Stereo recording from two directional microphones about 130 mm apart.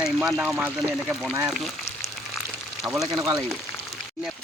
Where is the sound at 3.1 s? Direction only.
25° right (ahead or behind).